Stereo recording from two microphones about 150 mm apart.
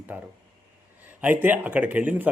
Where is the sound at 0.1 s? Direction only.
10° right (ahead or behind).